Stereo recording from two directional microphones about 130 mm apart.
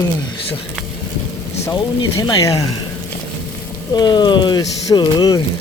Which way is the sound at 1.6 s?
25° left (ahead or behind).